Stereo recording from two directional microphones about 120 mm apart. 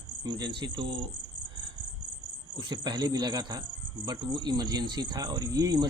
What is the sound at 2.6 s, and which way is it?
Speech, 35° right (ahead or behind).